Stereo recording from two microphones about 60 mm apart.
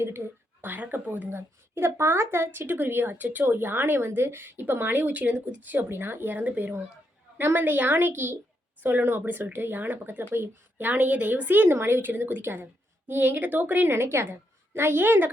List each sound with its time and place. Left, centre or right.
0.0 s speech: right
13.9 s a woman's voice: right